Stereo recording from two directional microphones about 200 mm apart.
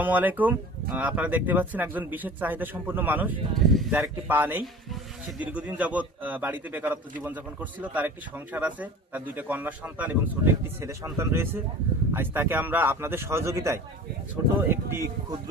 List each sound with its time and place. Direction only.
0.0 s a man's voice: 10° right (ahead or behind)